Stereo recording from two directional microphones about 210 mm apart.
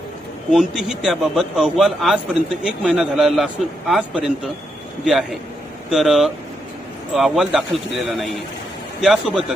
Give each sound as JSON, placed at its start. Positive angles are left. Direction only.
{"t": 0.8, "sound": "a man's voice", "side_deg": 0}